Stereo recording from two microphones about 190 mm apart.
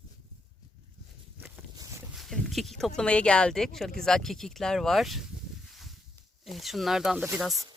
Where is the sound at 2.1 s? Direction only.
Centre (ahead or behind).